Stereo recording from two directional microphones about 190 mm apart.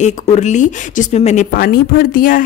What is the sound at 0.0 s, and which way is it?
Speech, 40° left (ahead or behind).